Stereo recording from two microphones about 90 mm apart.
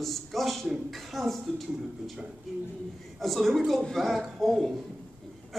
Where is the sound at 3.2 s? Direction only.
Centre (ahead or behind).